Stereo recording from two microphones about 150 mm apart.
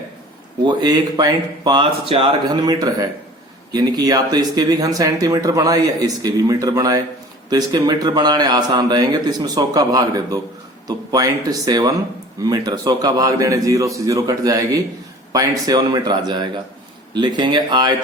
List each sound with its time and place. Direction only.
0.6 s a man's voice: 30° right (ahead or behind)